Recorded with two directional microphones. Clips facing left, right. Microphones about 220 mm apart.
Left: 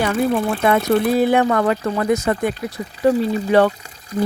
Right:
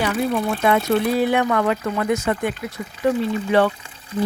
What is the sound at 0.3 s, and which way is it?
Speech, 50° left (ahead or behind).